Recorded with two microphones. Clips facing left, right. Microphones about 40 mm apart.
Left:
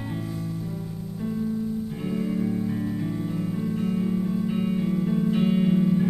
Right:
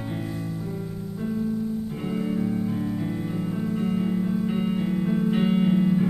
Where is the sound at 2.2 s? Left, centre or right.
Centre.